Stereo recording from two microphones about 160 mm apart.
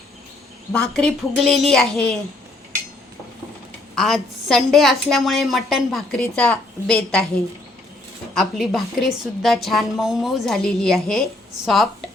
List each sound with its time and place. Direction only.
0.7 s a woman's voice: 5° left (ahead or behind)
3.9 s a woman's voice: centre (ahead or behind)
8.4 s a woman's voice: centre (ahead or behind)